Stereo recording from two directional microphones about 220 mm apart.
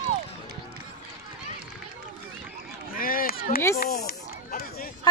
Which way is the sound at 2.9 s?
40° left (ahead or behind).